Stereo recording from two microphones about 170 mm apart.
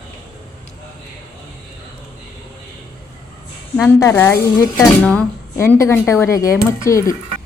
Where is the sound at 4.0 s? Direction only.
15° left (ahead or behind).